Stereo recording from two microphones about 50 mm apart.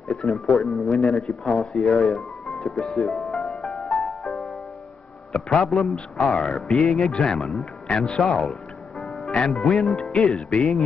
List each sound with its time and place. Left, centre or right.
0.1 s speech: centre
3.3 s music: centre
5.3 s speech: centre
6.3 s speech: left
6.7 s speech: centre
7.0 s speech: centre
9.5 s speech: centre